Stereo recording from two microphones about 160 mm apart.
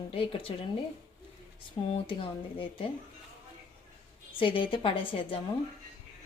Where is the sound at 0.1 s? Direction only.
35° left (ahead or behind).